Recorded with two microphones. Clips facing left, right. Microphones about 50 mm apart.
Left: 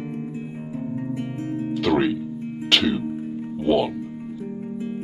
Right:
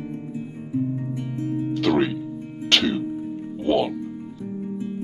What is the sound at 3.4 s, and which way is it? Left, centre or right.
Music, centre.